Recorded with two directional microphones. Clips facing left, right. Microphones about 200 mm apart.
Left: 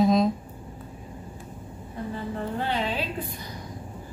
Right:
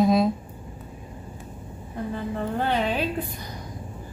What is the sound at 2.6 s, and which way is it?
Speech, 55° right (ahead or behind).